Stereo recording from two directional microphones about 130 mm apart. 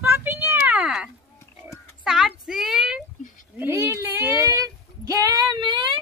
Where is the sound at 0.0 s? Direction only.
15° right (ahead or behind).